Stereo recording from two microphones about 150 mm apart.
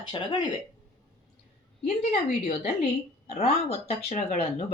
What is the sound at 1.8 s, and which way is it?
Speech, 45° left (ahead or behind).